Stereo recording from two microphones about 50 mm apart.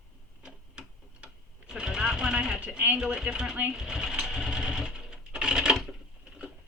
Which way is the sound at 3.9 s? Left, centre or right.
Centre.